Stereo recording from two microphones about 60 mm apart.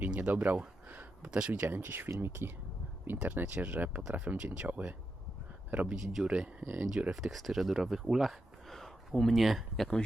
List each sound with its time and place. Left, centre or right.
0.0 s a sound: right
1.2 s speech: centre
1.6 s speech: right
5.9 s speech: centre
7.1 s speech: centre